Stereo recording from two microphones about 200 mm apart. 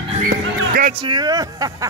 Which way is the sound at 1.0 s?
20° right (ahead or behind).